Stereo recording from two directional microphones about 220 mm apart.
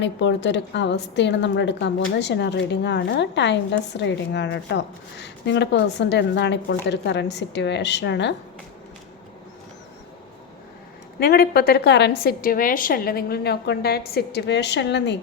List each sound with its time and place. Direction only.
0.0 s a woman's voice: 55° left (ahead or behind)
11.2 s a woman's voice: 45° left (ahead or behind)